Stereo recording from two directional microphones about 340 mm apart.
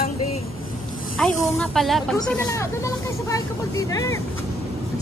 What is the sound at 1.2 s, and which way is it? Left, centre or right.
Speech, centre.